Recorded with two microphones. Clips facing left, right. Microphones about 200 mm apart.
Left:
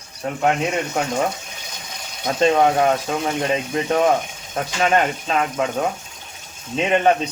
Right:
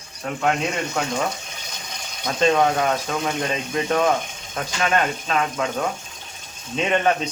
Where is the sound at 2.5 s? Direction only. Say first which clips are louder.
Left 3 dB; 30° left (ahead or behind).